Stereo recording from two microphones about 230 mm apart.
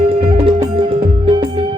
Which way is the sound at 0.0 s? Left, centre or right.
Right.